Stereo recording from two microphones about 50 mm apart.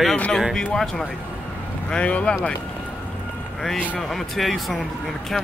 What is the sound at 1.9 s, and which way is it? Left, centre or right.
Speech, left.